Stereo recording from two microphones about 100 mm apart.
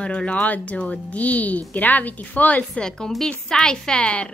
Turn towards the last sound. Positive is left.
turn(degrees=10)  # may be behind; listen again after turning